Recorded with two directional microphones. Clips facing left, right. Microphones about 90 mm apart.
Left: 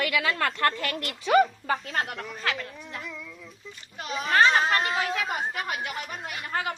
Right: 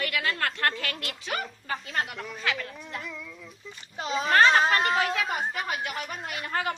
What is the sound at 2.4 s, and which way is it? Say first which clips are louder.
Speech: even; 40° left (ahead or behind).